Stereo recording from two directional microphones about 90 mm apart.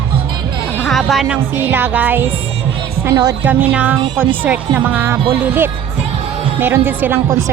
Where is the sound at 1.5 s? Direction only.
25° right (ahead or behind).